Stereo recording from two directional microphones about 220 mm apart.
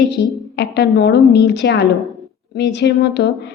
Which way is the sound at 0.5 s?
50° left (ahead or behind).